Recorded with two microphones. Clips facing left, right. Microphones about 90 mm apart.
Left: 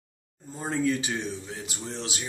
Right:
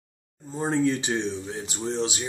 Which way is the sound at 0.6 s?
30° right (ahead or behind).